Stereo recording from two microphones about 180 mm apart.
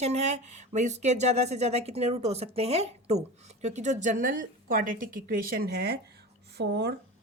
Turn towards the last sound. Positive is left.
turn(degrees=-70)  # may be behind; listen again after turning